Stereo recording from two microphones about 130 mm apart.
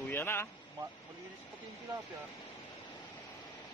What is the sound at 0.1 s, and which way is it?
Speech, 20° left (ahead or behind).